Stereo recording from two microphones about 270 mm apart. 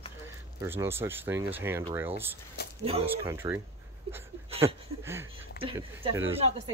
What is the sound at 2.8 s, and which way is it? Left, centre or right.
Speech, right.